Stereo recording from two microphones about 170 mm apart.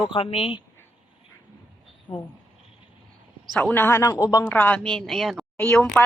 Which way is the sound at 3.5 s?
10° left (ahead or behind).